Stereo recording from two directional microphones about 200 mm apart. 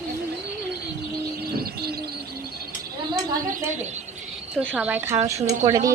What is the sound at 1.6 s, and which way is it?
Bird, 50° right (ahead or behind).